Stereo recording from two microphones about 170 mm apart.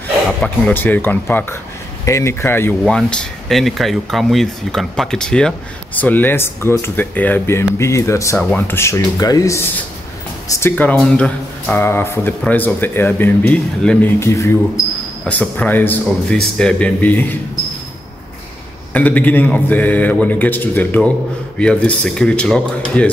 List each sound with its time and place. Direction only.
0.4 s speech: 5° left (ahead or behind)
2.8 s speech: 5° left (ahead or behind)
8.4 s speech: 5° left (ahead or behind)
18.9 s speech: 10° left (ahead or behind)